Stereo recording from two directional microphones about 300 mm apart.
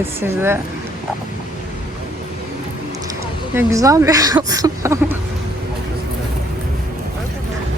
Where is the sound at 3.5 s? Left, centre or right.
Centre.